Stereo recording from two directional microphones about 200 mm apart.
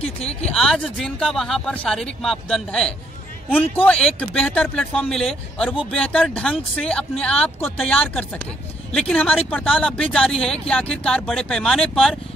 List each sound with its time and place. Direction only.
0.0 s speech: 30° left (ahead or behind)
0.5 s a man's voice: 5° left (ahead or behind)